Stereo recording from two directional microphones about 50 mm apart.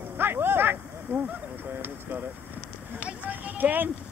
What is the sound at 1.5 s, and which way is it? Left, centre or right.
Speech, right.